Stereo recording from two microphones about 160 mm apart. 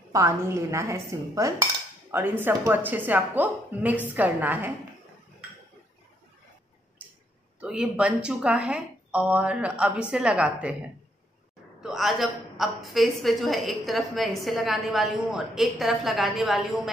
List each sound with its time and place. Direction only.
0.1 s dishes: 20° right (ahead or behind)
7.0 s a sound: 10° right (ahead or behind)
7.6 s dishes: 5° right (ahead or behind)
11.8 s a woman's voice: centre (ahead or behind)